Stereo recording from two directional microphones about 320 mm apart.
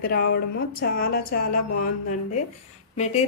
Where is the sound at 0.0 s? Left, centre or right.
Left.